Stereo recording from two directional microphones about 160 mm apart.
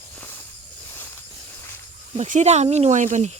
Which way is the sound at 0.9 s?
15° left (ahead or behind).